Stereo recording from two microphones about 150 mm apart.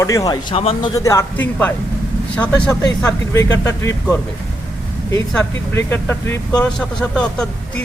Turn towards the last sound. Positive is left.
turn(degrees=5)  # may be behind; listen again after turning